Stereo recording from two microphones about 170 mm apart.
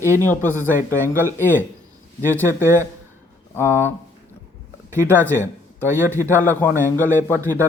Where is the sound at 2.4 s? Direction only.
15° right (ahead or behind).